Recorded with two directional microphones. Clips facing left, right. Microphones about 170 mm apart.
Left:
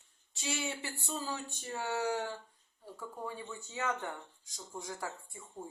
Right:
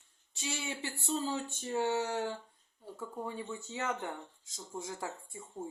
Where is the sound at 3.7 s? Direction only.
20° right (ahead or behind).